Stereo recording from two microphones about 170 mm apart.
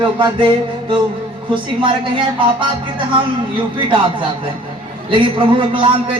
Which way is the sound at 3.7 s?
30° right (ahead or behind).